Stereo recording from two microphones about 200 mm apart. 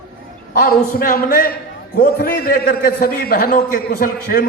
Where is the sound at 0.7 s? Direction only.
45° left (ahead or behind).